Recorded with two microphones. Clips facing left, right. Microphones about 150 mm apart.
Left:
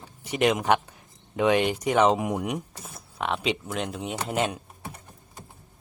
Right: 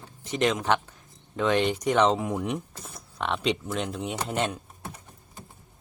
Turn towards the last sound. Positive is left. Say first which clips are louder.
# left 1 dB
turn(degrees=5)  # may be behind; listen again after turning